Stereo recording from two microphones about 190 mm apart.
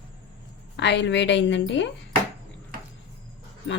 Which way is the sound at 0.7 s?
65° left (ahead or behind).